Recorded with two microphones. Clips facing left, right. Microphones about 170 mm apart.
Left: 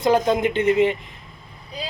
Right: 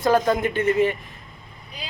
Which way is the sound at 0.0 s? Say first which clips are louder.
Left 1 dB; 15° left (ahead or behind).